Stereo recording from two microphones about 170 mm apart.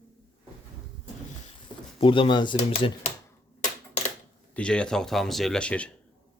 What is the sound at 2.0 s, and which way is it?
Speech, 30° left (ahead or behind).